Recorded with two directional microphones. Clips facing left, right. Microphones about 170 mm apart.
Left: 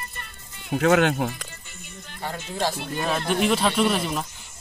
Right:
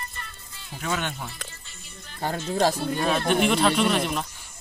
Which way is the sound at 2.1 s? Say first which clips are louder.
Right 5 dB; 40° right (ahead or behind).